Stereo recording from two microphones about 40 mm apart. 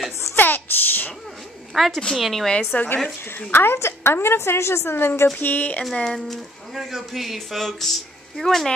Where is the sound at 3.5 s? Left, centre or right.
Left.